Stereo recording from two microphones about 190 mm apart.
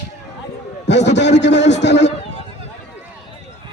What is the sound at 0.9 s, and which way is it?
A man's voice, 65° left (ahead or behind).